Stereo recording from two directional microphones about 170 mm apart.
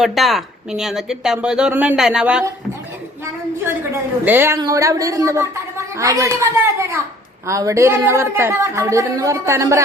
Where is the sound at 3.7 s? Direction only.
15° right (ahead or behind).